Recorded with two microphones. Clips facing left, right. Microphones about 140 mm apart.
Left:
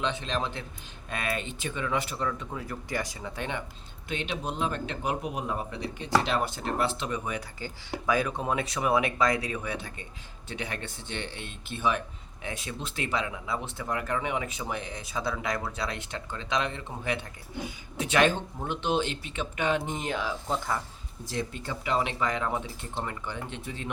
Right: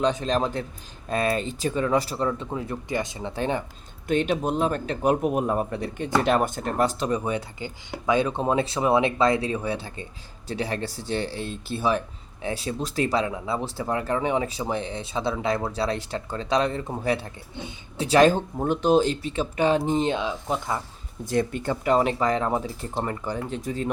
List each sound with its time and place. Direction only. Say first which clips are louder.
0.0 s speech: right 7 dB; 40° right (ahead or behind)
4.1 s speech: right 10 dB; 45° right (ahead or behind)
7.6 s speech: right 3 dB; 20° right (ahead or behind)
21.2 s speech: right 9 dB; 55° right (ahead or behind)